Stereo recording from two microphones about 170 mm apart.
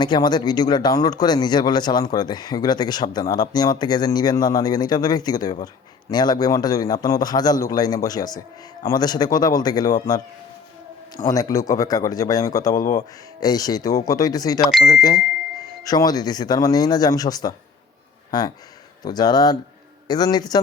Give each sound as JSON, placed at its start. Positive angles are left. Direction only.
{"t": 0.0, "sound": "speech", "side_deg": 25}
{"t": 11.3, "sound": "speech", "side_deg": 20}
{"t": 14.6, "sound": "speech", "side_deg": 0}
{"t": 14.8, "sound": "speech", "side_deg": 20}